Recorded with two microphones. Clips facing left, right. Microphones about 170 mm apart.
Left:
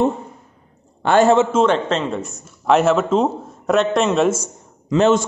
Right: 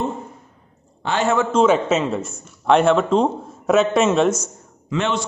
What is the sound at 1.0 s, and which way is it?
Speech, 50° left (ahead or behind).